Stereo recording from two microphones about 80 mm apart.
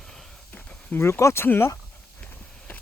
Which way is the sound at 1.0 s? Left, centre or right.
Left.